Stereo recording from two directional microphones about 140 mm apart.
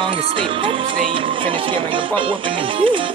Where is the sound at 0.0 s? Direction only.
40° right (ahead or behind).